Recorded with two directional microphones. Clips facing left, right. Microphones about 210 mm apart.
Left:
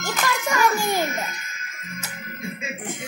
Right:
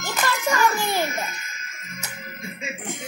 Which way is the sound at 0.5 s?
15° left (ahead or behind).